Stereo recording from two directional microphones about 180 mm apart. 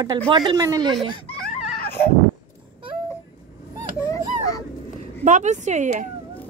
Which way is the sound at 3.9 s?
15° left (ahead or behind).